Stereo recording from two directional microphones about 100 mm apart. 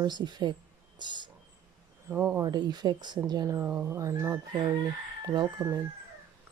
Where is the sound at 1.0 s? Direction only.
50° right (ahead or behind).